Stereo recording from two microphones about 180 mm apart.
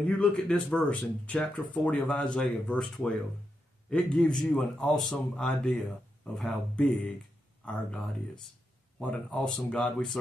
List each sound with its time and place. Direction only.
0.2 s speech: 5° left (ahead or behind)